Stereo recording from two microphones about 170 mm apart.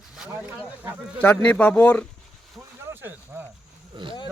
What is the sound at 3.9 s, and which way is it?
Speech, 25° right (ahead or behind).